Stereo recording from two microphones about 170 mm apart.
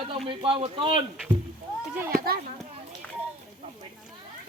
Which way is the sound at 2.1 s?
60° right (ahead or behind).